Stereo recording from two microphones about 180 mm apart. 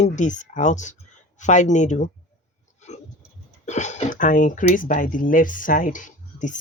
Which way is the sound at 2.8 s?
40° left (ahead or behind).